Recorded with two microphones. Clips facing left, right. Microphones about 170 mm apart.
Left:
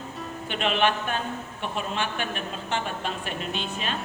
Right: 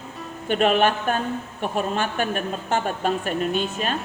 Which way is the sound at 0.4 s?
45° right (ahead or behind).